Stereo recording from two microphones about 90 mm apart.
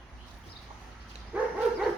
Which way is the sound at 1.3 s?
10° right (ahead or behind).